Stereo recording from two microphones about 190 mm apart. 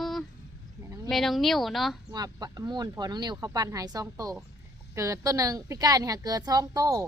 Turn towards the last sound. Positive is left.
turn(degrees=-20)  # may be behind; listen again after turning